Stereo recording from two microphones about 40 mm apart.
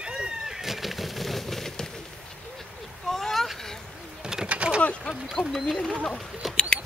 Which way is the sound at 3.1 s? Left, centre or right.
Centre.